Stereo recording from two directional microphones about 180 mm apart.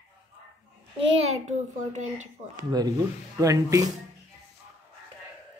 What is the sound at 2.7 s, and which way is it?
Speech, 20° right (ahead or behind).